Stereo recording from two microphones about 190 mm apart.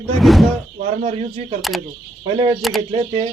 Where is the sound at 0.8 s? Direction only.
35° right (ahead or behind).